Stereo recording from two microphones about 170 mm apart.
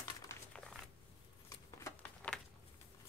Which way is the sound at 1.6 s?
20° left (ahead or behind).